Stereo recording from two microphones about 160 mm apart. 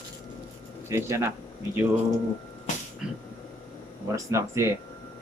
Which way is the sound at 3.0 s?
5° right (ahead or behind).